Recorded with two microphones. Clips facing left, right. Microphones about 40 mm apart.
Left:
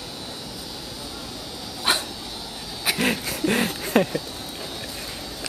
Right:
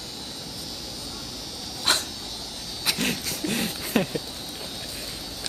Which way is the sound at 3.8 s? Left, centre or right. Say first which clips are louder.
Left 3 dB; centre.